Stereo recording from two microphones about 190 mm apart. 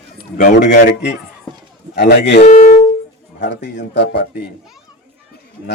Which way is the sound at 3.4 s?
65° left (ahead or behind).